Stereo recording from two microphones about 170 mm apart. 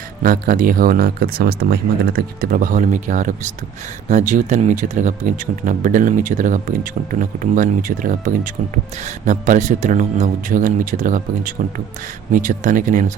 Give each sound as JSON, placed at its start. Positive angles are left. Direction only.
{"t": 0.2, "sound": "speech", "side_deg": -55}